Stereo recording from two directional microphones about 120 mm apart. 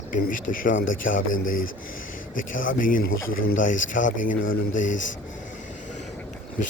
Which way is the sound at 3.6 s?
90° left.